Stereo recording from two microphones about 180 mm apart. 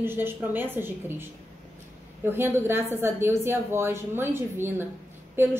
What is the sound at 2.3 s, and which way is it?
A woman's voice, 15° right (ahead or behind).